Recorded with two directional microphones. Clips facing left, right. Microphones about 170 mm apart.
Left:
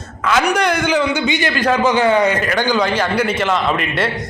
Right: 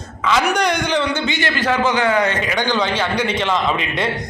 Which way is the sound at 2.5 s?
10° left (ahead or behind).